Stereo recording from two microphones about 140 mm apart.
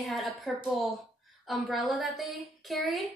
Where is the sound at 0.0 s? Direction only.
Centre (ahead or behind).